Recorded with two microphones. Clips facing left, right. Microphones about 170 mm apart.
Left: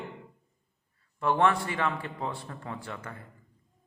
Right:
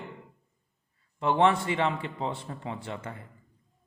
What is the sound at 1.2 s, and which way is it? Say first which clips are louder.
Speech: right 2 dB; 20° right (ahead or behind).